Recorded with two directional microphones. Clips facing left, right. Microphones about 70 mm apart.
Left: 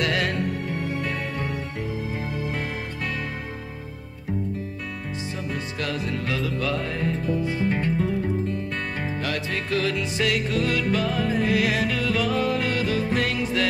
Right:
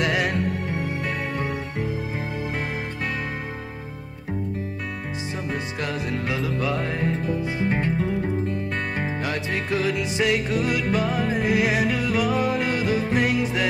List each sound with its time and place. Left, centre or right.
0.0 s music: centre
5.5 s music: right